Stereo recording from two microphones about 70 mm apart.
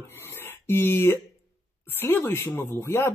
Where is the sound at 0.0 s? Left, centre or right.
Left.